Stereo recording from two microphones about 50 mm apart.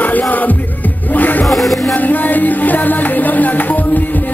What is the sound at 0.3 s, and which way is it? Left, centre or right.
Music, left.